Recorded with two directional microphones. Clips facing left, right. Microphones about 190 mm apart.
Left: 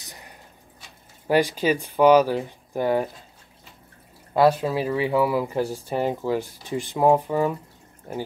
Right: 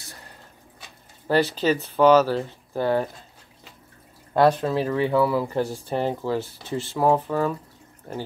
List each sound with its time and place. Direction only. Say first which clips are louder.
0.0 s a sound: even; 15° left (ahead or behind)
1.2 s speech: even; 15° left (ahead or behind)
4.3 s speech: even; 5° left (ahead or behind)